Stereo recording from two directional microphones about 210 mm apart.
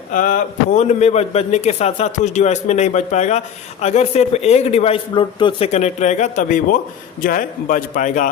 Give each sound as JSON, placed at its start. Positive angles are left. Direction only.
{"t": 0.1, "sound": "a man's voice", "side_deg": 40}